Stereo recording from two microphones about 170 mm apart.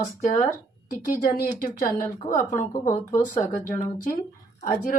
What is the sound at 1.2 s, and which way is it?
Speech, 65° left (ahead or behind).